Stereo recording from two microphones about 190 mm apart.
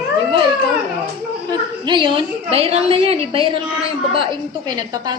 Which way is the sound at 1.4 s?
25° right (ahead or behind).